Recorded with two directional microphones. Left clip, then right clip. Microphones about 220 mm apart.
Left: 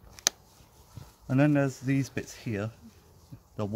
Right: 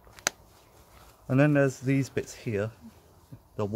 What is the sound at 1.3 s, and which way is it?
Speech, 25° right (ahead or behind).